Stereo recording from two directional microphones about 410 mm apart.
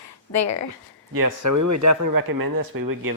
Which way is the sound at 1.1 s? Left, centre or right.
Right.